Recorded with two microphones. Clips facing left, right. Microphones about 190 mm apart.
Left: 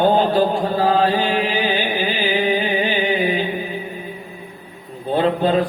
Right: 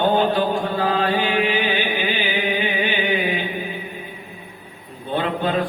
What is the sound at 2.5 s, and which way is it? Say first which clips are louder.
Music: left 3 dB; 35° left (ahead or behind).